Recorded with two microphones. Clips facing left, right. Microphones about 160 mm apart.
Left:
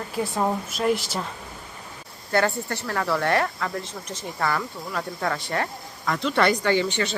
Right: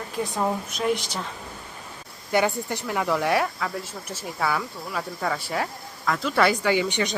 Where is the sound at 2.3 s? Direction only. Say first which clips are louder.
Even; 15° right (ahead or behind).